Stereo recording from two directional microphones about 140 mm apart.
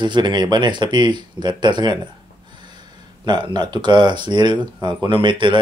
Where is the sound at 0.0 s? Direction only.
35° right (ahead or behind).